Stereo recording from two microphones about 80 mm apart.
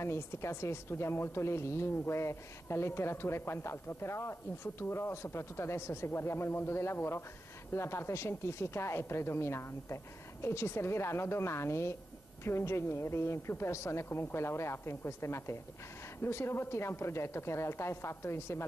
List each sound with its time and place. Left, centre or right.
0.0 s a woman's voice: left